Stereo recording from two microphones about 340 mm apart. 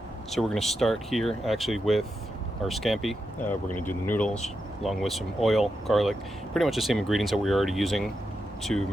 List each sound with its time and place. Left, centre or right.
0.3 s speech: centre